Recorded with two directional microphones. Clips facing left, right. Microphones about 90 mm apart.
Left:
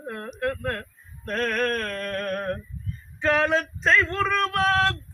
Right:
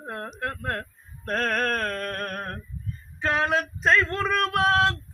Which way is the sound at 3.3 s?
5° right (ahead or behind).